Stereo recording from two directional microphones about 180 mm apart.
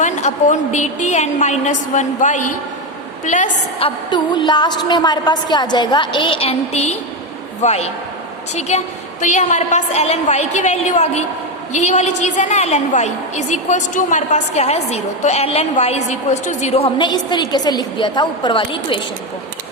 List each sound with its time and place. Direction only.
0.0 s a woman's voice: 40° left (ahead or behind)
3.8 s a woman's voice: 25° left (ahead or behind)